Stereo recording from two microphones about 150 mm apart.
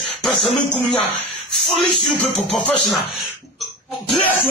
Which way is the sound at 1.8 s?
Centre (ahead or behind).